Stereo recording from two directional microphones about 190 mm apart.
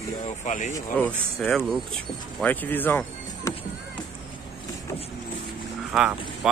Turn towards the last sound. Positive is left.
turn(degrees=-5)  # may be behind; listen again after turning